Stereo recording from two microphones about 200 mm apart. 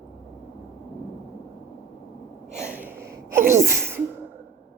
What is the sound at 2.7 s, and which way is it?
Sneeze, 10° right (ahead or behind).